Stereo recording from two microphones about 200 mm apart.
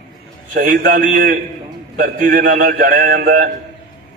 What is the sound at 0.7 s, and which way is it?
A man's voice, 45° right (ahead or behind).